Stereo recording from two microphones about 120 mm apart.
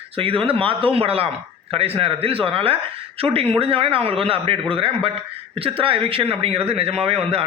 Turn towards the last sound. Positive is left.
turn(degrees=-55)  # may be behind; listen again after turning